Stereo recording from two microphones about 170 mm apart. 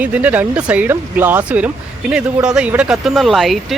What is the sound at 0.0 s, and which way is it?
Speech, 10° right (ahead or behind).